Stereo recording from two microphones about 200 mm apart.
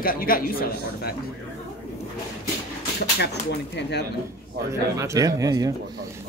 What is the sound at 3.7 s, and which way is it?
Speech, 55° left (ahead or behind).